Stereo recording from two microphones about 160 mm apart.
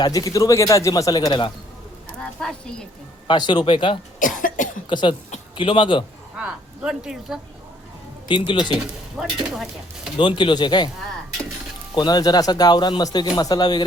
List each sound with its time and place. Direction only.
0.0 s a man's voice: 25° left (ahead or behind)
2.4 s speech: 5° left (ahead or behind)
3.2 s a man's voice: 30° left (ahead or behind)
4.2 s cough: 55° left (ahead or behind)
4.9 s a man's voice: 30° left (ahead or behind)
6.3 s speech: 5° right (ahead or behind)
8.3 s a man's voice: 30° left (ahead or behind)
8.7 s speech: 5° right (ahead or behind)
10.2 s a man's voice: 30° left (ahead or behind)
11.9 s a man's voice: 25° left (ahead or behind)